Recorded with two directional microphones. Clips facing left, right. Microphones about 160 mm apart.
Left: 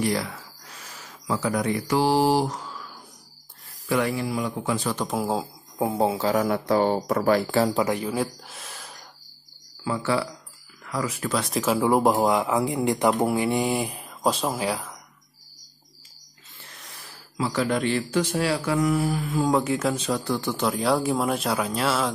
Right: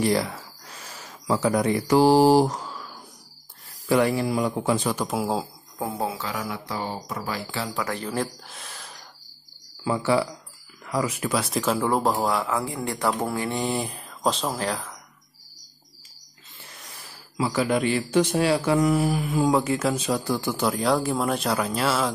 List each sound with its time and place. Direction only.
0.0 s speech: 30° right (ahead or behind)
3.9 s speech: 35° right (ahead or behind)
4.8 s speech: 5° right (ahead or behind)
5.8 s speech: 20° left (ahead or behind)
6.3 s speech: 50° left (ahead or behind)
7.7 s speech: 20° left (ahead or behind)
8.0 s speech: 5° left (ahead or behind)
9.8 s speech: 15° right (ahead or behind)
11.3 s speech: centre (ahead or behind)
17.4 s speech: 10° right (ahead or behind)
18.1 s speech: 20° right (ahead or behind)
19.5 s speech: centre (ahead or behind)